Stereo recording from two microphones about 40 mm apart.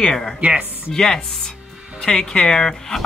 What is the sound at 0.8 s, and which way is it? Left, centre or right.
Speech, centre.